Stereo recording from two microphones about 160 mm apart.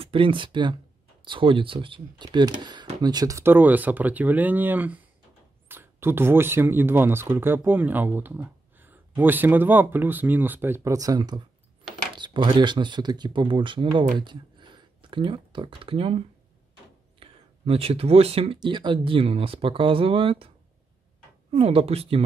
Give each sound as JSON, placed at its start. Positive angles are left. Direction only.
{"t": 0.0, "sound": "speech", "side_deg": -35}
{"t": 21.5, "sound": "speech", "side_deg": -35}